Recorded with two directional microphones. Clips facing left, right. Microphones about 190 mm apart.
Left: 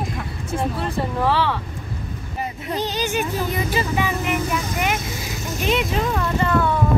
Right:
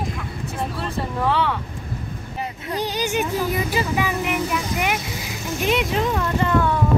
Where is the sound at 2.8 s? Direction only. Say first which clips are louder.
Right 1 dB; 15° right (ahead or behind).